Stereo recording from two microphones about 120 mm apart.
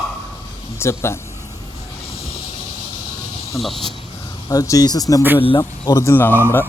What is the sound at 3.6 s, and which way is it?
Speech, centre (ahead or behind).